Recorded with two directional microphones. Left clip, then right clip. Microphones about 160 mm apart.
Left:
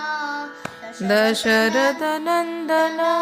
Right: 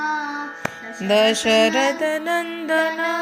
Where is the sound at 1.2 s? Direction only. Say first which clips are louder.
Right 3 dB; 75° left (ahead or behind).